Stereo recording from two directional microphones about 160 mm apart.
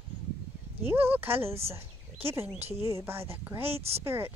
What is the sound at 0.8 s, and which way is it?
Speech, 15° right (ahead or behind).